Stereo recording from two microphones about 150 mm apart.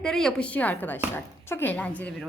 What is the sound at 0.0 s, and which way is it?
Speech, 5° left (ahead or behind).